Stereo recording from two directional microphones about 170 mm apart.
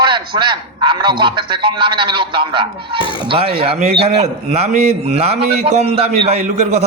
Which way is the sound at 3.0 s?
30° left (ahead or behind).